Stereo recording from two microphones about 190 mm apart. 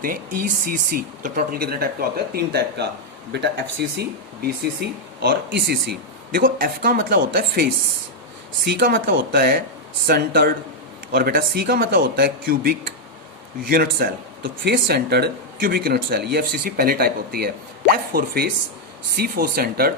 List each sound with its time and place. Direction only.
0.0 s speech: 50° right (ahead or behind)
13.8 s speech: 55° right (ahead or behind)